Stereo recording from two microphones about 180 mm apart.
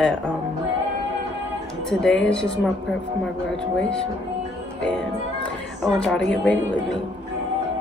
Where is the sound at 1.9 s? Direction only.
5° left (ahead or behind).